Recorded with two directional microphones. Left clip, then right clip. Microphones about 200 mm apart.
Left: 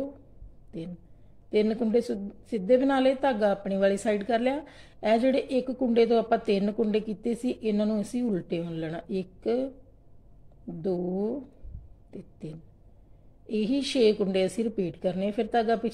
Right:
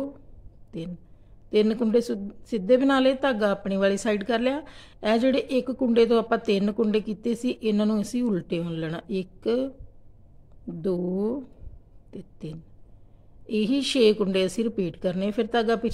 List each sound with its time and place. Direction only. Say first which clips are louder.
0.7 s a woman's voice: right 3 dB; 20° right (ahead or behind)
10.8 s a woman's voice: right 2 dB; 20° right (ahead or behind)